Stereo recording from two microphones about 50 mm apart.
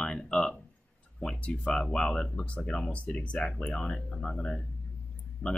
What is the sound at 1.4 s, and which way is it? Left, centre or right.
Speech, centre.